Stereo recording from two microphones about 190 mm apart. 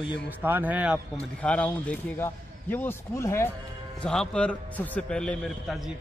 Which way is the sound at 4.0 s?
5° left (ahead or behind).